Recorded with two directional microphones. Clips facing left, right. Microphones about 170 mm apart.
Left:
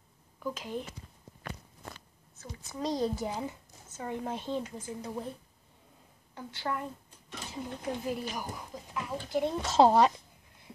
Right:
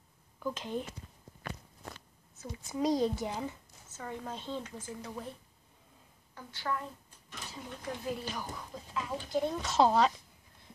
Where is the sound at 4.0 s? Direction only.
20° left (ahead or behind).